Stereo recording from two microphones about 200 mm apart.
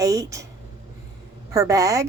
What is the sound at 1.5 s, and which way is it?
Speech, 15° right (ahead or behind).